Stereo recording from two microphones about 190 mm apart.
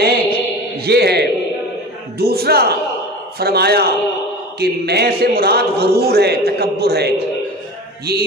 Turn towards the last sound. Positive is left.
turn(degrees=-60)  # may be behind; listen again after turning